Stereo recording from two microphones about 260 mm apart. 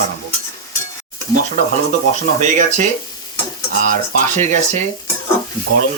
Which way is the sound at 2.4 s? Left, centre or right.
Right.